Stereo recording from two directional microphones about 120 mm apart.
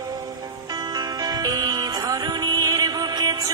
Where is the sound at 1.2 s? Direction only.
35° right (ahead or behind).